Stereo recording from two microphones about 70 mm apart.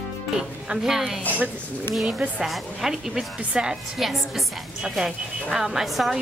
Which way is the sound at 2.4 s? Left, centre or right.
Centre.